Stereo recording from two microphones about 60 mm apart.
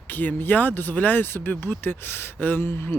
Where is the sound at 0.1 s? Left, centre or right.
Left.